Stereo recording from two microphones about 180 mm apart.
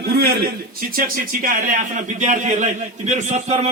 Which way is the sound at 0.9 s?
50° right (ahead or behind).